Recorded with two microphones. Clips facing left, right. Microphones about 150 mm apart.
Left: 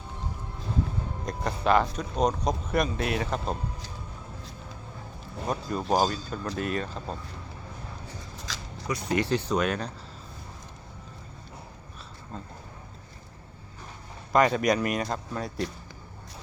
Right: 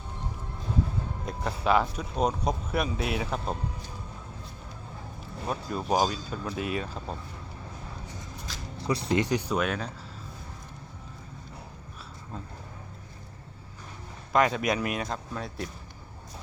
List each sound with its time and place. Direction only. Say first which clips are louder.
1.2 s speech: left 2 dB; 5° right (ahead or behind)
5.5 s speech: left 1 dB; 5° right (ahead or behind)
8.4 s a sound: left 3 dB; 90° left
8.9 s speech: right 1 dB; 30° right (ahead or behind)
9.2 s speech: left 1 dB; 15° right (ahead or behind)
14.3 s speech: left 2 dB; centre (ahead or behind)